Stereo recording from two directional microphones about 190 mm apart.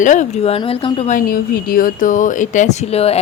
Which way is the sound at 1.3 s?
50° left (ahead or behind).